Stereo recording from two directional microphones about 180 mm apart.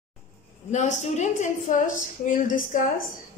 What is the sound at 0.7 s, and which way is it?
A woman's voice, 40° left (ahead or behind).